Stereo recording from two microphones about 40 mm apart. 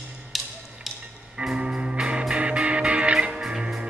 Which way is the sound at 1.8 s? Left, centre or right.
Right.